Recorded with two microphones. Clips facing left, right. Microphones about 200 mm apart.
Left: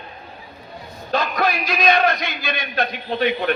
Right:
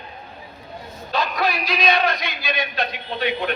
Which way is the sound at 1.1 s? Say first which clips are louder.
Left 2 dB; 50° left (ahead or behind).